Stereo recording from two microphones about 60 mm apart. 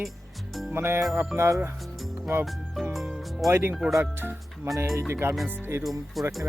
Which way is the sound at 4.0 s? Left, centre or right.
Right.